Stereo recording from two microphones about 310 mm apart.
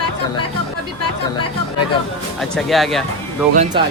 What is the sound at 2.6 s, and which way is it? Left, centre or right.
Speech, centre.